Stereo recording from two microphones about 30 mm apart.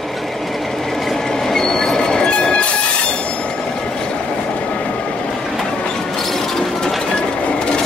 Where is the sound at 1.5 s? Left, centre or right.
Centre; by 2.7 s left.